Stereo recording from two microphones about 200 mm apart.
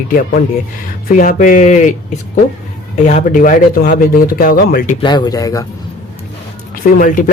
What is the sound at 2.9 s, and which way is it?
Speech, 35° left (ahead or behind).